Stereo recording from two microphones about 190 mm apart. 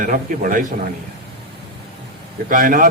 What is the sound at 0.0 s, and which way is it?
Speech, 45° right (ahead or behind).